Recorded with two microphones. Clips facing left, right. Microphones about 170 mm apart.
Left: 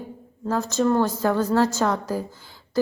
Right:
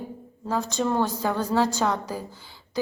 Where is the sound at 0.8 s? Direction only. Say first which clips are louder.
Left 5 dB; 10° right (ahead or behind).